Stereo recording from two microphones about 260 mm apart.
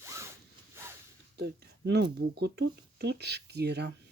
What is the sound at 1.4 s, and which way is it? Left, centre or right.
Speech, right.